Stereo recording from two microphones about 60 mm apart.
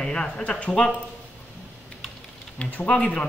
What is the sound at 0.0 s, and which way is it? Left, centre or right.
Speech, centre.